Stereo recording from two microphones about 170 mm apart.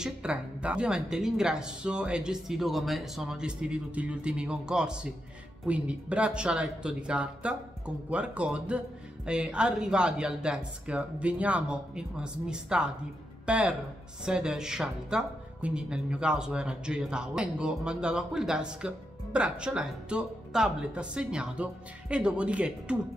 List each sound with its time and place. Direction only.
0.0 s a woman's voice: 5° right (ahead or behind)